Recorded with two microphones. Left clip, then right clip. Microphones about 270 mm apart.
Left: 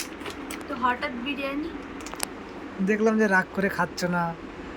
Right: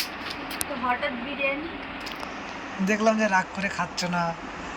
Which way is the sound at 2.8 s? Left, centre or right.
Centre.